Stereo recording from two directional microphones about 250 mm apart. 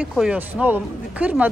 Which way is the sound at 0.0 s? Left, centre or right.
Centre.